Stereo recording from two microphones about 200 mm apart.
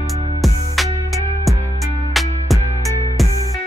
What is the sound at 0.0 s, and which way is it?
Music, centre (ahead or behind).